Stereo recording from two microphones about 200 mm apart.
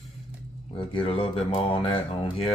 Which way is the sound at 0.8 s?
25° left (ahead or behind).